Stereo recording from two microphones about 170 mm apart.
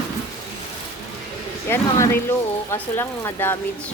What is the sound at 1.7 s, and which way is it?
Speech, 10° left (ahead or behind).